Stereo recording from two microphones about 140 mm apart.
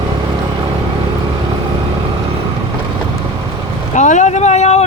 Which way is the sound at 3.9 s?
60° left (ahead or behind).